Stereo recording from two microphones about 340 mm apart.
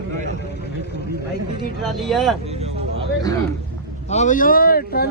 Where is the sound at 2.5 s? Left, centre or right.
Centre.